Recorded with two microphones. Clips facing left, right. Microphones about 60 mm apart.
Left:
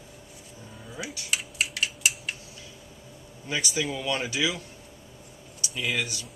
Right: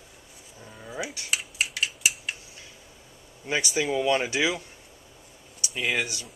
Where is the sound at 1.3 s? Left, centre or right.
Centre.